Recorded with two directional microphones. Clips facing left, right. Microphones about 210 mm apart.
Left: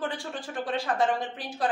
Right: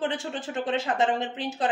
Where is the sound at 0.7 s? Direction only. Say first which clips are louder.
Right 1 dB; 25° right (ahead or behind).